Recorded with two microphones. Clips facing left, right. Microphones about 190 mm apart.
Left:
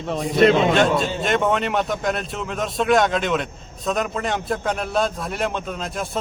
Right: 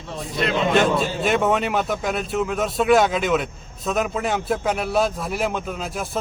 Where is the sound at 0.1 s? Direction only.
55° left (ahead or behind).